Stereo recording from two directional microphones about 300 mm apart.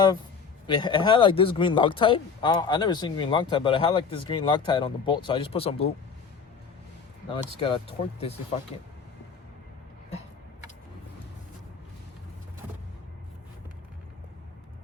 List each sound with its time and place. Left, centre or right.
0.7 s speech: centre
7.6 s speech: centre